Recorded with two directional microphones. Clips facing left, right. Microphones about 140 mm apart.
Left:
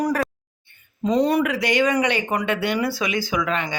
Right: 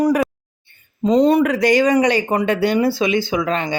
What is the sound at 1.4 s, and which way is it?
Speech, 40° right (ahead or behind).